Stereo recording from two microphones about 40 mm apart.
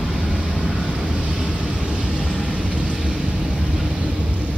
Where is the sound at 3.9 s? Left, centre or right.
Right.